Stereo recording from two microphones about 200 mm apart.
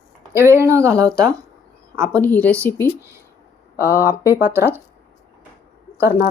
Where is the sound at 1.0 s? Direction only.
5° left (ahead or behind).